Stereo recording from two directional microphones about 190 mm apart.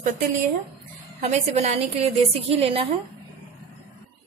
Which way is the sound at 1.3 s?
35° right (ahead or behind).